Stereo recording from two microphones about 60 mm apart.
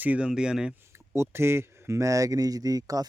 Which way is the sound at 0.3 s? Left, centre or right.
Centre.